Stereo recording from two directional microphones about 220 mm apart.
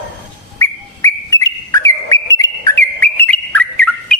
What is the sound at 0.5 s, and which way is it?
Bird, 15° left (ahead or behind).